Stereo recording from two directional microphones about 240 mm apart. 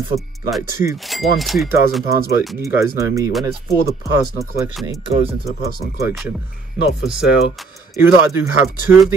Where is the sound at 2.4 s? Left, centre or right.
Centre.